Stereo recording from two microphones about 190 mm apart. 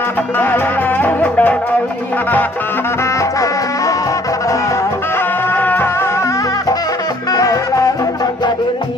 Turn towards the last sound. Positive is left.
turn(degrees=20)  # may be behind; listen again after turning